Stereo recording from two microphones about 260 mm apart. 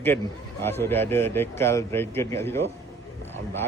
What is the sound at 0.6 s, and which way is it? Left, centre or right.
A man's voice, centre.